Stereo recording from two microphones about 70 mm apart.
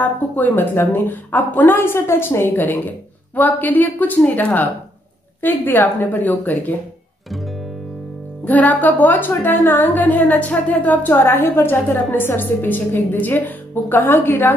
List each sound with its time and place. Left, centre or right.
0.0 s a woman's voice: left
8.5 s a woman's voice: left